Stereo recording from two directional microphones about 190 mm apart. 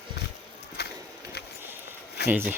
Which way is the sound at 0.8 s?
55° left (ahead or behind).